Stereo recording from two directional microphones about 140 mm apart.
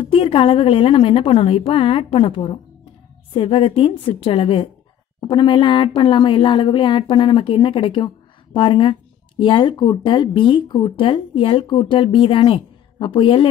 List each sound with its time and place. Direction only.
0.0 s speech: 40° left (ahead or behind)